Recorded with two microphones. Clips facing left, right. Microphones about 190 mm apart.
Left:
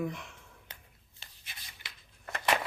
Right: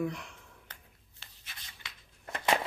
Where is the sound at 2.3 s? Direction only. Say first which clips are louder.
Right 1 dB; 25° right (ahead or behind).